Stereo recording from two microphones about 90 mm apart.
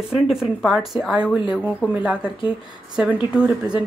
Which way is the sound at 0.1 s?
5° right (ahead or behind).